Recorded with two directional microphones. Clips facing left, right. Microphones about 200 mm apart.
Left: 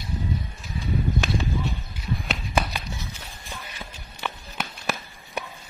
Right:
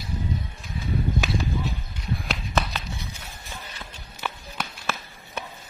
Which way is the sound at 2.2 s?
10° left (ahead or behind).